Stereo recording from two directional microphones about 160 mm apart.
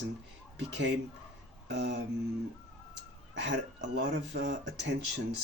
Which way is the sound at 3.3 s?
90° right.